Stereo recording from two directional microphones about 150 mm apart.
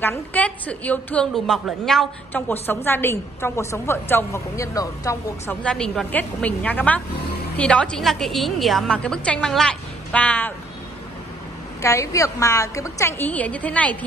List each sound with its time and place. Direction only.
0.0 s a woman's voice: 10° left (ahead or behind)
5.6 s a woman's voice: 5° left (ahead or behind)
11.8 s a woman's voice: 20° left (ahead or behind)